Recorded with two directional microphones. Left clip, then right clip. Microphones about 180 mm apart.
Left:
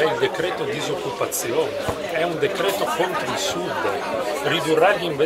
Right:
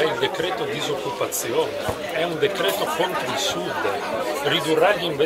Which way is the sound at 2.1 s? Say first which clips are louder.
Even; 5° left (ahead or behind).